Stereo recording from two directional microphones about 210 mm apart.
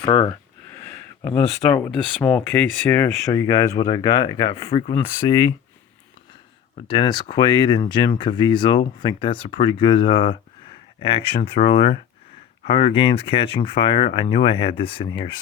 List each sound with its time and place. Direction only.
0.0 s speech: 20° left (ahead or behind)
6.8 s speech: 25° left (ahead or behind)